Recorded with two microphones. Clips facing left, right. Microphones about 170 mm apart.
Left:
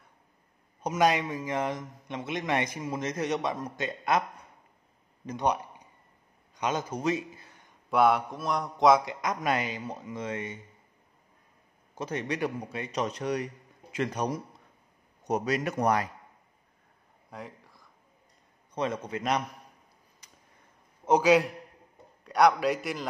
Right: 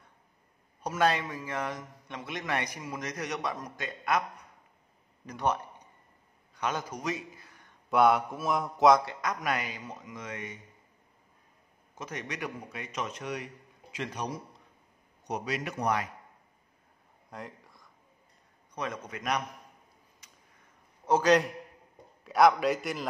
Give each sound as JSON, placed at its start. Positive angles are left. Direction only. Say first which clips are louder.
{"t": 0.8, "sound": "a man's voice", "louder": "left 2 dB", "side_deg": 15}
{"t": 5.2, "sound": "a man's voice", "louder": "left 2 dB", "side_deg": 20}
{"t": 7.9, "sound": "a man's voice", "louder": "even", "side_deg": 0}
{"t": 9.0, "sound": "a man's voice", "louder": "left 3 dB", "side_deg": 20}
{"t": 11.9, "sound": "speech", "louder": "left 7 dB", "side_deg": 30}
{"t": 13.9, "sound": "speech", "louder": "left 6 dB", "side_deg": 45}
{"t": 17.3, "sound": "a sound", "louder": "left 1 dB", "side_deg": 0}
{"t": 18.8, "sound": "a man's voice", "louder": "left 6 dB", "side_deg": 30}
{"t": 21.2, "sound": "a man's voice", "louder": "even", "side_deg": 5}